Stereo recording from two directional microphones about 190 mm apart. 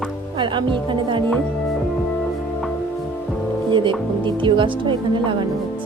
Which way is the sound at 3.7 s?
25° right (ahead or behind).